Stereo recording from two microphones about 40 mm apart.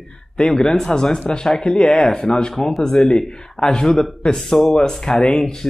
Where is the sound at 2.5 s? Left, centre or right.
Centre.